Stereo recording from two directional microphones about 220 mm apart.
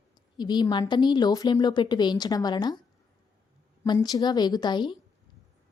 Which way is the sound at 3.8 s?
20° left (ahead or behind).